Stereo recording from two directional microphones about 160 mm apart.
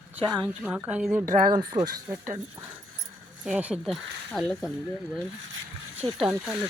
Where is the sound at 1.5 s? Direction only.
25° right (ahead or behind).